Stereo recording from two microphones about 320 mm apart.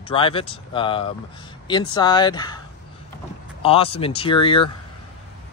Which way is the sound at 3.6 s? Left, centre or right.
Centre.